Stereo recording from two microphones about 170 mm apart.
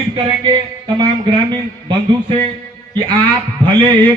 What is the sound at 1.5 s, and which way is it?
A man's voice, 30° right (ahead or behind).